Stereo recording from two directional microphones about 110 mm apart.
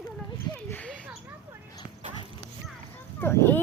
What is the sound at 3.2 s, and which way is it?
Speech, 20° left (ahead or behind).